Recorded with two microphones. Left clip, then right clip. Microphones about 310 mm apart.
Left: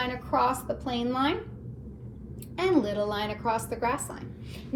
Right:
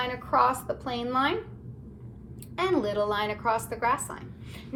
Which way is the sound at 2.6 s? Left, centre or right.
Centre.